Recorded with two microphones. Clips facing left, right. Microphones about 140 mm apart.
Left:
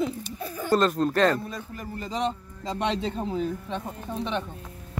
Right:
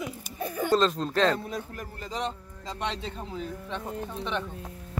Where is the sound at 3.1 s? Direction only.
30° left (ahead or behind).